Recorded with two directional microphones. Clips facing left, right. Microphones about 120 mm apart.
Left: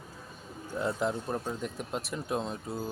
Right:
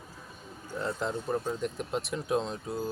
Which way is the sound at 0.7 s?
10° left (ahead or behind).